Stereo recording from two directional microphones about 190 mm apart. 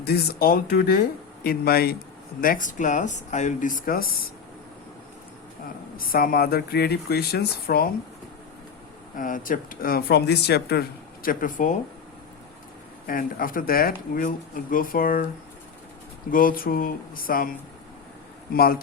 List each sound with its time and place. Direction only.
0.0 s speech: 55° left (ahead or behind)
6.0 s speech: 50° left (ahead or behind)
9.1 s speech: 45° left (ahead or behind)
13.1 s speech: 50° left (ahead or behind)
16.3 s speech: 50° left (ahead or behind)
18.5 s speech: 50° left (ahead or behind)